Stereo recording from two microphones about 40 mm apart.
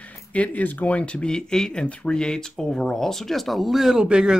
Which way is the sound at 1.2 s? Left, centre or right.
Centre.